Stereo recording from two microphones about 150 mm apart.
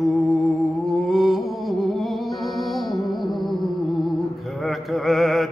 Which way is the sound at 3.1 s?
Centre (ahead or behind).